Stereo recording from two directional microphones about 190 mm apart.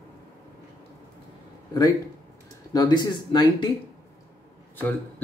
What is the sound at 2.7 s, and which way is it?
Speech, 20° left (ahead or behind).